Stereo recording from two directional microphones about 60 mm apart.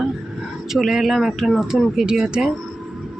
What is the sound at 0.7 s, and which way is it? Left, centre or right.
Speech, centre.